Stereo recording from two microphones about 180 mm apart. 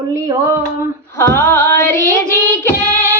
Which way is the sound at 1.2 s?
15° left (ahead or behind).